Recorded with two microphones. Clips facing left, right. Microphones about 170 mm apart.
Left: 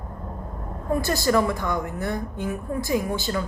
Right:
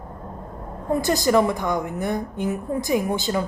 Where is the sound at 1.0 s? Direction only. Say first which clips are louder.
Right 3 dB; 20° right (ahead or behind).